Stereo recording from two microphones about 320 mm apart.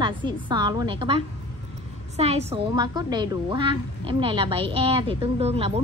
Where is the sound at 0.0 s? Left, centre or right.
Centre.